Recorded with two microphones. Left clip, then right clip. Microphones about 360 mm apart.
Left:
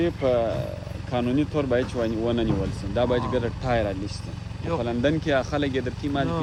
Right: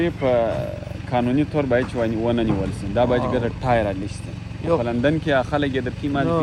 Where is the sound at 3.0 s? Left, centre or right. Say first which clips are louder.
Right 3 dB; right.